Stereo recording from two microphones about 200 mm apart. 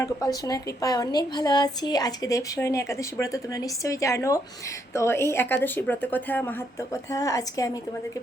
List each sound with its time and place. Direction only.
0.0 s a woman's voice: 15° left (ahead or behind)